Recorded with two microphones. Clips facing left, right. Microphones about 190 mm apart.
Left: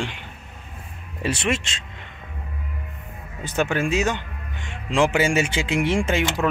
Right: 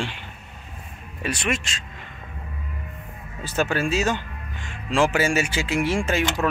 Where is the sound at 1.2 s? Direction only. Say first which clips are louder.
Left 2 dB; 25° left (ahead or behind).